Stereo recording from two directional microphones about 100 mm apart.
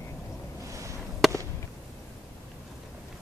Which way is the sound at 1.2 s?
Centre (ahead or behind).